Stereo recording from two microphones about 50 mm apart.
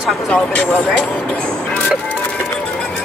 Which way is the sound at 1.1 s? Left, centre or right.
Left.